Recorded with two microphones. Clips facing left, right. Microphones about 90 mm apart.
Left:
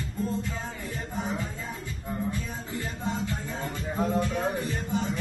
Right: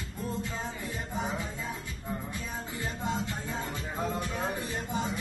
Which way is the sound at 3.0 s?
20° right (ahead or behind).